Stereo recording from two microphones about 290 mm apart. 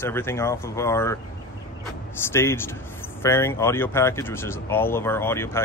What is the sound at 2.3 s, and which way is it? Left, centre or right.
Speech, centre.